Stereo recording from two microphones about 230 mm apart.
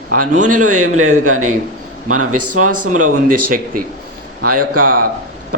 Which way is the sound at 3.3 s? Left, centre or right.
Right.